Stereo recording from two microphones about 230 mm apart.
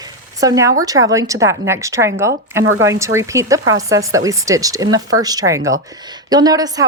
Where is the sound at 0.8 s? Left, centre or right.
Centre.